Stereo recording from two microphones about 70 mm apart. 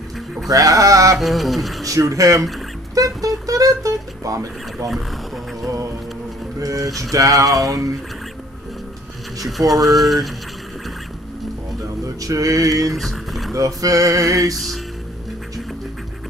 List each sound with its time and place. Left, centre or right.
0.5 s speech: right
1.1 s a sound: centre
1.9 s speech: right
2.9 s music: right
4.8 s speech: centre
6.6 s speech: right
7.6 s male singing: right
9.5 s a sound: centre
12.2 s male singing: right
12.9 s boat: centre
13.5 s male singing: right